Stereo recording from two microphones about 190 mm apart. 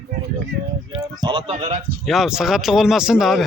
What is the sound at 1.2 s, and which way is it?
Speech, 30° right (ahead or behind).